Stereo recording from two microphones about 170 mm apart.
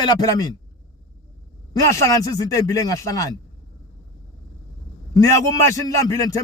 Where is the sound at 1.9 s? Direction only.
20° left (ahead or behind).